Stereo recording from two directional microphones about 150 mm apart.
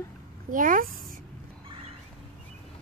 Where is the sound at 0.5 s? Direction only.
65° right (ahead or behind).